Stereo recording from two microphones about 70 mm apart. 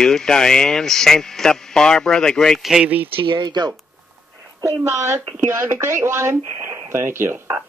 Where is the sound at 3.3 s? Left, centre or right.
Right.